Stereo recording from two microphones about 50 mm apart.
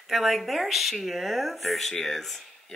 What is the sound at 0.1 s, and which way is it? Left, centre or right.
Speech, centre.